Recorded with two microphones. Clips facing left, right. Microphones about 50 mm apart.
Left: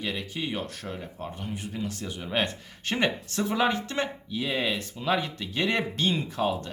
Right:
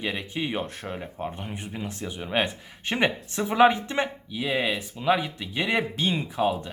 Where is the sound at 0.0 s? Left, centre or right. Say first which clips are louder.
Right 2 dB; right.